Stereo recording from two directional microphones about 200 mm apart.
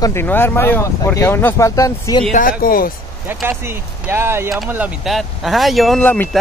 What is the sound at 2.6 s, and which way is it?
Speech, 45° left (ahead or behind).